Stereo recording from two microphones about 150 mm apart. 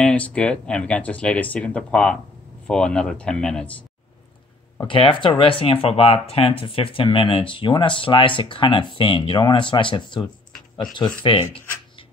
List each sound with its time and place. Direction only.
0.0 s speech: 10° left (ahead or behind)
4.8 s speech: 35° left (ahead or behind)
11.2 s speech: 35° left (ahead or behind)